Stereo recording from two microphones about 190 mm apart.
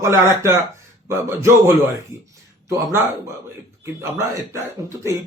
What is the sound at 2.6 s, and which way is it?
Speech, 15° right (ahead or behind).